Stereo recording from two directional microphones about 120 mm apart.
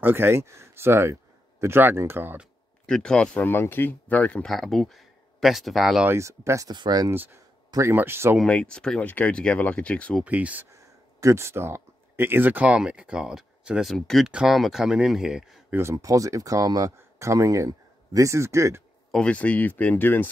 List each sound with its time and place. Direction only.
0.0 s speech: 20° right (ahead or behind)
2.9 s speech: 5° left (ahead or behind)
6.0 s speech: 25° right (ahead or behind)
6.7 s speech: 35° right (ahead or behind)
7.1 s speech: 20° right (ahead or behind)
8.4 s speech: 10° left (ahead or behind)
10.2 s speech: 15° right (ahead or behind)
10.7 s speech: 25° right (ahead or behind); by 15.6 s 5° right (ahead or behind)
15.7 s speech: 25° right (ahead or behind)
19.1 s speech: 10° left (ahead or behind)